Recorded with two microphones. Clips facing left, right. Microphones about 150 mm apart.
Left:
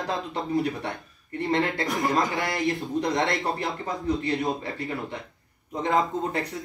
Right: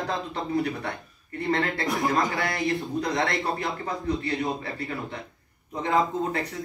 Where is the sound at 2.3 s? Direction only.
20° left (ahead or behind).